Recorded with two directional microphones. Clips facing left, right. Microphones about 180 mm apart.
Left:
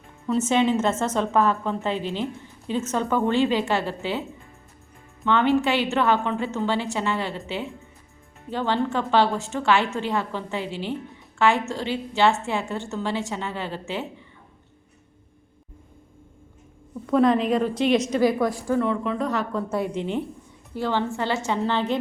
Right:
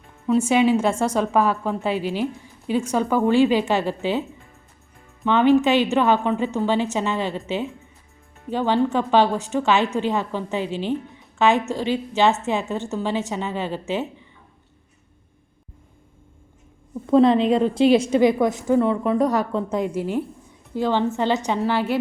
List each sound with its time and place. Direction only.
0.3 s a woman's voice: 10° right (ahead or behind)
5.2 s a woman's voice: 15° right (ahead or behind)
17.1 s a woman's voice: 25° right (ahead or behind)
18.8 s speech: 35° right (ahead or behind)
19.5 s a woman's voice: 15° right (ahead or behind)
20.7 s a woman's voice: 15° right (ahead or behind)